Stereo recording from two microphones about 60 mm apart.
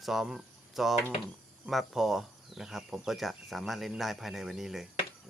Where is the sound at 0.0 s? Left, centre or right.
Centre.